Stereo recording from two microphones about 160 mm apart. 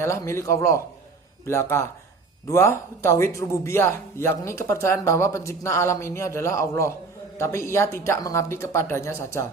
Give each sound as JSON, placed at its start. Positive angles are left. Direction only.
{"t": 0.0, "sound": "a man's voice", "side_deg": 15}